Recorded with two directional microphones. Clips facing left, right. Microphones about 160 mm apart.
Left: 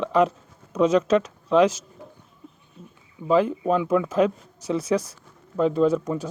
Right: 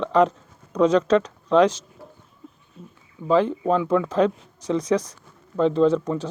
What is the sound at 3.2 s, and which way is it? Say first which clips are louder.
Speech: right 1 dB; 15° left (ahead or behind).